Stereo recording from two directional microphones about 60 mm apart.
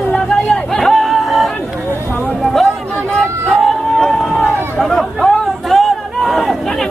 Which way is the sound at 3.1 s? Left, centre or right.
Centre.